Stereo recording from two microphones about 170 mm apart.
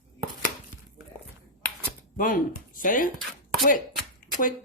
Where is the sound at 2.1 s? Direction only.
55° left (ahead or behind).